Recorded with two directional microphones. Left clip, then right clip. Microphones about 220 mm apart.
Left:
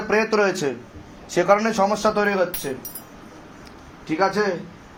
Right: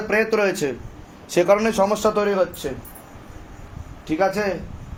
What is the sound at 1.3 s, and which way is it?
Speech, 30° right (ahead or behind).